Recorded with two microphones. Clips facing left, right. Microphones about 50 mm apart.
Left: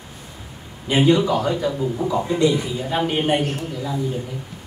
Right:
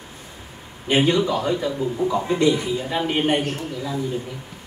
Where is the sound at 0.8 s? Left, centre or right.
Right.